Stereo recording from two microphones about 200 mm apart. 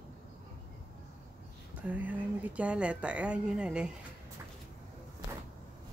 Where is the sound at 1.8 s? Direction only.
10° right (ahead or behind).